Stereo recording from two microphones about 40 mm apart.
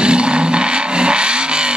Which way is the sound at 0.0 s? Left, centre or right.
Right.